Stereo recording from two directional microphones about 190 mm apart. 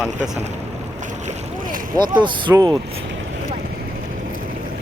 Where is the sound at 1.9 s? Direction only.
25° right (ahead or behind).